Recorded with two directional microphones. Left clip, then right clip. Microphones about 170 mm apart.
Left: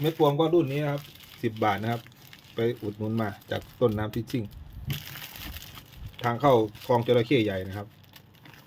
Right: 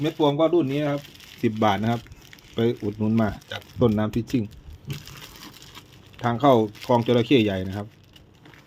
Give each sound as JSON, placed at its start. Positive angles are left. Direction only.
{"t": 0.0, "sound": "speech", "side_deg": -40}
{"t": 6.2, "sound": "speech", "side_deg": -35}